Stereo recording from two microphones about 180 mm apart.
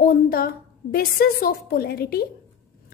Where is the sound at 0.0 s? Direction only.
55° left (ahead or behind).